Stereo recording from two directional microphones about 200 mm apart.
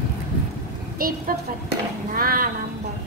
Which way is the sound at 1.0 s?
45° right (ahead or behind).